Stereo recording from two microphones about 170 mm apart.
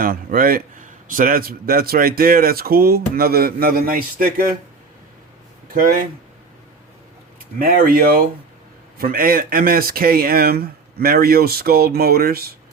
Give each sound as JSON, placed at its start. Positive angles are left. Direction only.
{"t": 0.0, "sound": "a man's voice", "side_deg": -60}
{"t": 5.7, "sound": "a man's voice", "side_deg": -55}
{"t": 7.6, "sound": "a man's voice", "side_deg": -55}